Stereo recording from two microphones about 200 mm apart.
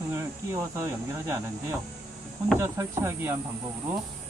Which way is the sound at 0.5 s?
15° right (ahead or behind).